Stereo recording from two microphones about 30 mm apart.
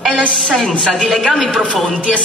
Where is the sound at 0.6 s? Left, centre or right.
Centre.